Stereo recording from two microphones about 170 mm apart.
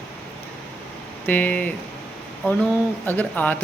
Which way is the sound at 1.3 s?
10° left (ahead or behind).